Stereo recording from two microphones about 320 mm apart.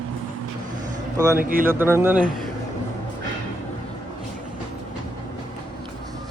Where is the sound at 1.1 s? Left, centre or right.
Centre.